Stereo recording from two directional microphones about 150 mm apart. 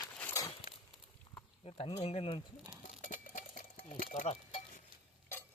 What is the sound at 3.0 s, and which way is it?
Sewing machine, 60° left (ahead or behind).